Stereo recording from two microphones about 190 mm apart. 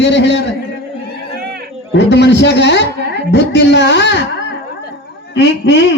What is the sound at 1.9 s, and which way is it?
A man's voice, 65° left (ahead or behind).